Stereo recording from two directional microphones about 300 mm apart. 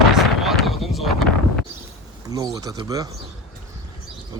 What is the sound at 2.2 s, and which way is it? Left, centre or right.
Speech, centre.